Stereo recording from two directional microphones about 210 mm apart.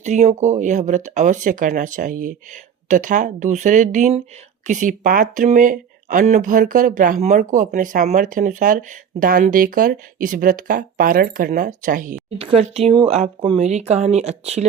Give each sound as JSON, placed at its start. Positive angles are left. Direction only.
{"t": 0.0, "sound": "speech", "side_deg": -35}
{"t": 12.4, "sound": "speech", "side_deg": -30}